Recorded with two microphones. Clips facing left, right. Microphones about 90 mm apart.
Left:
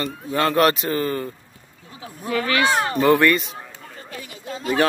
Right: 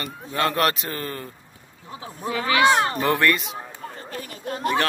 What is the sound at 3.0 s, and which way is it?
Speech, centre (ahead or behind).